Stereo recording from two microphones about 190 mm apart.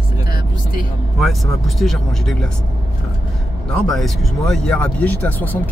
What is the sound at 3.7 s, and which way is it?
Speech, centre (ahead or behind).